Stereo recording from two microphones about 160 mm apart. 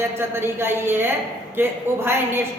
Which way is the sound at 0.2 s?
15° right (ahead or behind).